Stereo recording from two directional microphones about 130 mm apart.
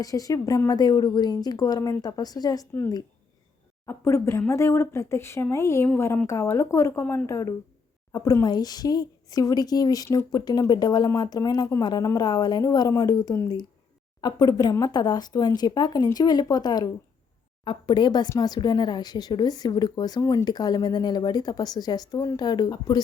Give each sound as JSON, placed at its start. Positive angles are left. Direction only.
{"t": 0.0, "sound": "speech", "side_deg": 25}
{"t": 3.8, "sound": "speech", "side_deg": 20}